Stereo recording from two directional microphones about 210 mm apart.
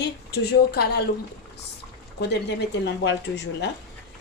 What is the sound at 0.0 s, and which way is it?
Speech, 50° left (ahead or behind).